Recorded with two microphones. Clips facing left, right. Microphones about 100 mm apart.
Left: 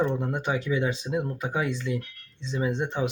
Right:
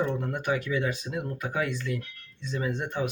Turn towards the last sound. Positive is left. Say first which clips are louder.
# left 3 dB
turn(degrees=20)  # may be behind; listen again after turning